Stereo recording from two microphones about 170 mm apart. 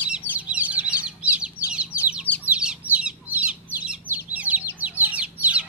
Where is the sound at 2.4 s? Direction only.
5° right (ahead or behind).